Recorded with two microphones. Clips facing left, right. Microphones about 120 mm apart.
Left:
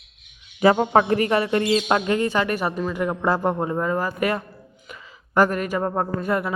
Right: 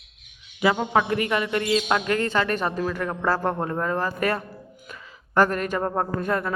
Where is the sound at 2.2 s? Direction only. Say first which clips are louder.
Left 2 dB; 15° left (ahead or behind).